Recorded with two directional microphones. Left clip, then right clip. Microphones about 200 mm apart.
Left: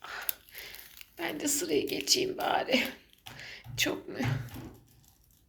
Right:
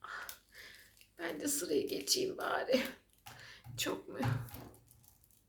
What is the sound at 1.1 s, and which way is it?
A woman's voice, 5° left (ahead or behind).